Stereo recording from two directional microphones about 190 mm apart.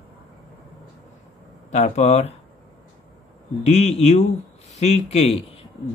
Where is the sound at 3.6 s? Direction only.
35° left (ahead or behind).